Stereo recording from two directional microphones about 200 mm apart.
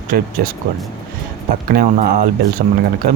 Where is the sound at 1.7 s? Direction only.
50° right (ahead or behind).